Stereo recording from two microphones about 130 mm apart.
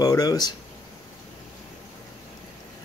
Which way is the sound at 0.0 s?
30° left (ahead or behind).